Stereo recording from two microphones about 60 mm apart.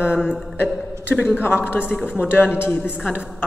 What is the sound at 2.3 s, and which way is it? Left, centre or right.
Speech, left.